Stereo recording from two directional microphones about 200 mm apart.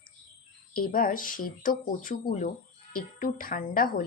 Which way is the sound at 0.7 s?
45° left (ahead or behind).